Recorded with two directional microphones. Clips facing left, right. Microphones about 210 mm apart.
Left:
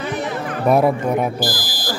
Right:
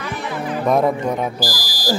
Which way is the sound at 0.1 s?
55° left (ahead or behind).